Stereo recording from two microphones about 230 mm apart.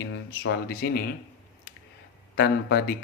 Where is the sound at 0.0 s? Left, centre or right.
Left.